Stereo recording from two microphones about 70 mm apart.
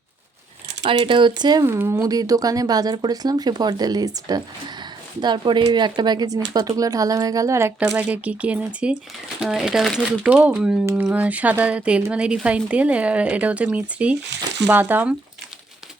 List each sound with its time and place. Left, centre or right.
0.9 s speech: right
1.6 s speech: right
2.0 s speech: right
7.9 s a woman's voice: right
9.4 s speech: centre
9.8 s speech: centre
10.2 s speech: centre
11.1 s a woman's voice: right